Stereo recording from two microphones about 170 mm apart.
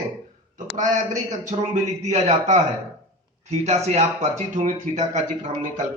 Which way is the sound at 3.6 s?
40° right (ahead or behind).